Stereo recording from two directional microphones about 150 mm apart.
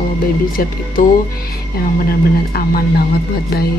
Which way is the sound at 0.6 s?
75° left (ahead or behind).